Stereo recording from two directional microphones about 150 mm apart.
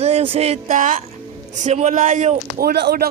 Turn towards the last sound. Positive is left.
turn(degrees=-90)